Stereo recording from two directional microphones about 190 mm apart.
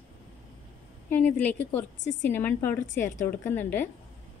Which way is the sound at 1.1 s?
10° left (ahead or behind).